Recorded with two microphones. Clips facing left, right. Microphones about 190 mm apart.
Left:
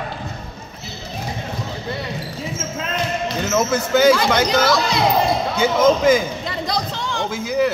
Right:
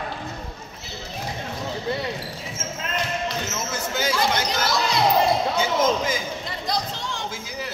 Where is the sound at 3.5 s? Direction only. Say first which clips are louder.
Left 11 dB; 55° left (ahead or behind).